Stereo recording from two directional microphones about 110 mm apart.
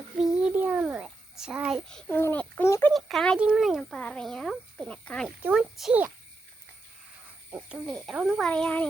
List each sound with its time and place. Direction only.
0.2 s a sound: 10° right (ahead or behind)
2.0 s a child's voice: 15° left (ahead or behind)
2.6 s speech: 25° left (ahead or behind)
2.9 s a child's voice: centre (ahead or behind)
5.4 s speech: 15° right (ahead or behind)
7.5 s a child's voice: 10° right (ahead or behind)
8.4 s a child's voice: 10° left (ahead or behind)